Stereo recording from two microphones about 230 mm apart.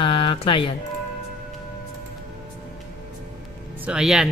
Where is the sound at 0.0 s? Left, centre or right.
Left.